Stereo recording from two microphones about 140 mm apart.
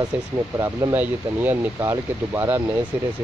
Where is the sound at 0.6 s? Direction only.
25° right (ahead or behind).